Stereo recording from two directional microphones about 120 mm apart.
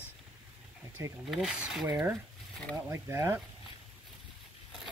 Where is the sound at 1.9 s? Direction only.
20° right (ahead or behind).